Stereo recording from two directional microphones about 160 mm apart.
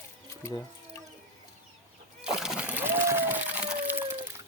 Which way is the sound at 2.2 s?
5° right (ahead or behind).